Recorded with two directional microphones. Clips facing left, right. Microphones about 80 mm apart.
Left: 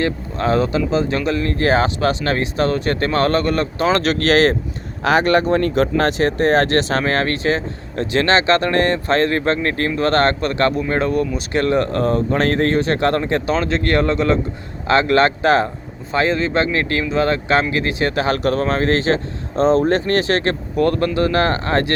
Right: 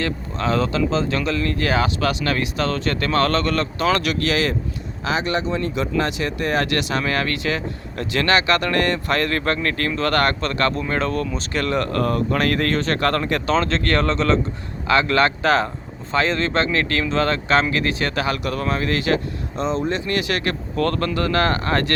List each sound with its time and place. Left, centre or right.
0.0 s speech: left
4.0 s speech: left
5.0 s speech: left
6.0 s speech: left; by 14.3 s centre
14.8 s speech: left
18.3 s speech: left
19.6 s speech: left